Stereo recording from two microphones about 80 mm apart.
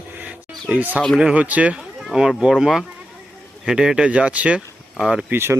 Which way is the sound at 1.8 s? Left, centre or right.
Centre.